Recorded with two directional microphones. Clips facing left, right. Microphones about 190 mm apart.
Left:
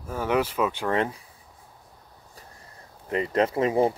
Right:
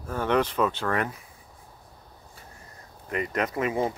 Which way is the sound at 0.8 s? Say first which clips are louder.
Left 2 dB; 25° left (ahead or behind).